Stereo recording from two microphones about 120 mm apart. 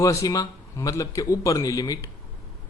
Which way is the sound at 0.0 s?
25° left (ahead or behind).